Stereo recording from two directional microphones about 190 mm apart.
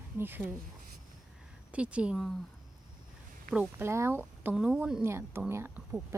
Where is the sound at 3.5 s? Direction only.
10° right (ahead or behind).